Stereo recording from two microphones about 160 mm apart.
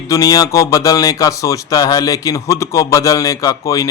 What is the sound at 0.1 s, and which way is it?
A man's voice, 20° left (ahead or behind).